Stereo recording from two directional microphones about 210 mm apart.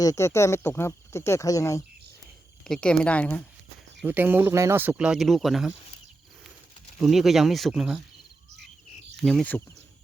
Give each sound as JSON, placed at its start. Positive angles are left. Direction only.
{"t": 0.0, "sound": "speech", "side_deg": 15}
{"t": 2.6, "sound": "speech", "side_deg": 5}
{"t": 4.0, "sound": "speech", "side_deg": -10}
{"t": 7.0, "sound": "speech", "side_deg": 0}
{"t": 9.2, "sound": "speech", "side_deg": 5}